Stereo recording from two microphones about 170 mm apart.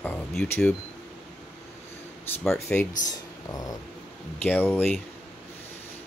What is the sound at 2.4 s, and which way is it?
Speech, 10° left (ahead or behind).